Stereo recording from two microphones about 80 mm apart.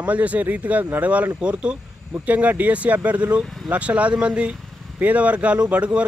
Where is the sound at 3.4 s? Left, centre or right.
Centre.